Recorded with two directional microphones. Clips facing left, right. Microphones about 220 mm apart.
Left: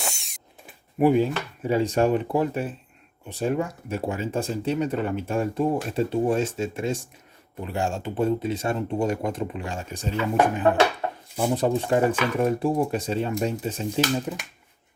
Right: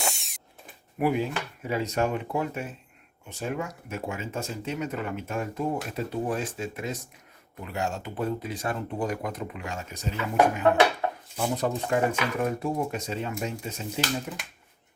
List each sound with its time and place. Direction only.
0.0 s drill: centre (ahead or behind)
0.9 s speech: 30° left (ahead or behind)
11.3 s speech: 30° left (ahead or behind)